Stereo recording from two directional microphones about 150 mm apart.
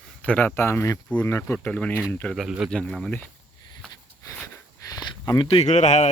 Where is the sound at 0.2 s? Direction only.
10° left (ahead or behind).